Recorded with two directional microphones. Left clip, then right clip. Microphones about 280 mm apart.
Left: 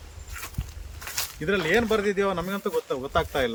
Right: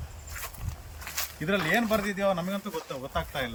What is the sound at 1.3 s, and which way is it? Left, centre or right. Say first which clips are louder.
Speech: left 3 dB; centre.